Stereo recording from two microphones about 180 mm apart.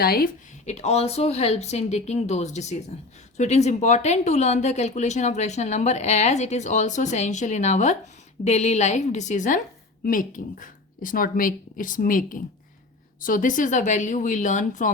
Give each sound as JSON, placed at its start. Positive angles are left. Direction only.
{"t": 0.0, "sound": "speech", "side_deg": 55}
{"t": 0.6, "sound": "speech", "side_deg": 40}